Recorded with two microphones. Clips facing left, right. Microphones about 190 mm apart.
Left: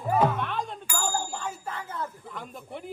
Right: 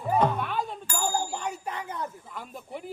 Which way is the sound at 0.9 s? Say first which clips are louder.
Right 2 dB; 15° right (ahead or behind).